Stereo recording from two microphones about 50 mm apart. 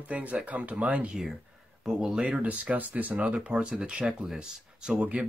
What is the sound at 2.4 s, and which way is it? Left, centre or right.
Speech, right.